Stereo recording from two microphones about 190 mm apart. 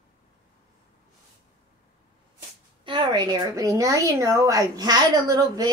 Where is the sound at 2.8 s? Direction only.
25° right (ahead or behind).